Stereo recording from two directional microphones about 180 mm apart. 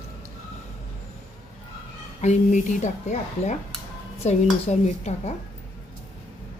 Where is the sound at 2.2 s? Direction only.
40° left (ahead or behind).